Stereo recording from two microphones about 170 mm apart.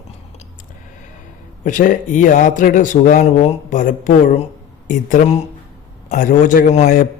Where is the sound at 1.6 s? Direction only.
50° left (ahead or behind).